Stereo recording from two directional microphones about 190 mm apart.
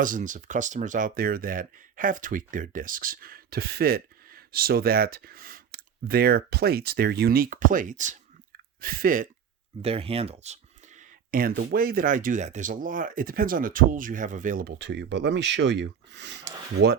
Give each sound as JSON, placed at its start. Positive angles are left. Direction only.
{"t": 0.0, "sound": "speech", "side_deg": -45}
{"t": 9.8, "sound": "speech", "side_deg": -30}